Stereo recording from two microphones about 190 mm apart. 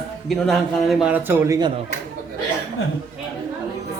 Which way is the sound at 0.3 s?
Centre (ahead or behind).